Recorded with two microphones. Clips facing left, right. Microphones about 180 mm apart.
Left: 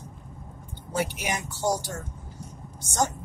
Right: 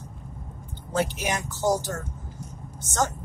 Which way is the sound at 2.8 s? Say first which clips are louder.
Even; 15° left (ahead or behind).